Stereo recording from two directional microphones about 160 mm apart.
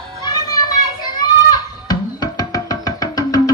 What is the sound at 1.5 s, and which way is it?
Music, 25° left (ahead or behind).